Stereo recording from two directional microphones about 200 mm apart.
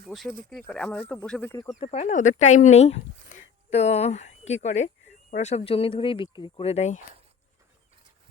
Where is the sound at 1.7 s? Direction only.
30° left (ahead or behind).